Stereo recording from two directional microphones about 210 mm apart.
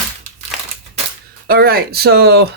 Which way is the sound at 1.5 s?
45° right (ahead or behind).